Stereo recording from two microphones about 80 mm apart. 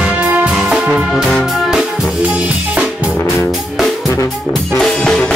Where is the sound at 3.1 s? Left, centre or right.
Left.